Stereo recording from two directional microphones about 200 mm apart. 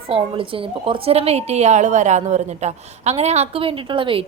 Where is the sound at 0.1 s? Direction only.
25° right (ahead or behind).